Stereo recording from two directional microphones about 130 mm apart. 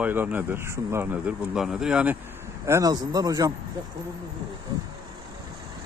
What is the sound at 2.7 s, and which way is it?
Speech, 25° right (ahead or behind).